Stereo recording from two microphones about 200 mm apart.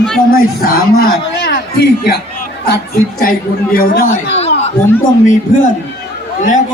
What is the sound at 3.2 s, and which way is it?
Speech, 45° left (ahead or behind).